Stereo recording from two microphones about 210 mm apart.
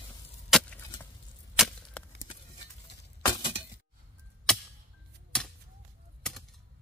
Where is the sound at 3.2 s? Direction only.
25° left (ahead or behind).